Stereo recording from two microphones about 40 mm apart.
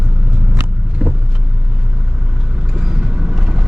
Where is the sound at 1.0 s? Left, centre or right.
Right.